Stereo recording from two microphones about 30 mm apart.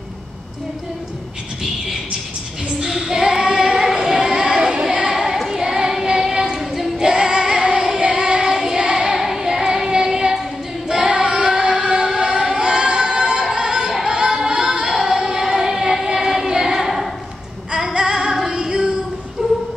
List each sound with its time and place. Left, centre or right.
2.8 s female singing: centre
3.5 s child singing: right
3.8 s female singing: centre
4.6 s child singing: centre
6.6 s singing: centre
7.0 s music: right
8.1 s child singing: right
10.9 s singing: right
13.6 s music: right
14.9 s music: centre
17.9 s female singing: right
18.5 s singing: right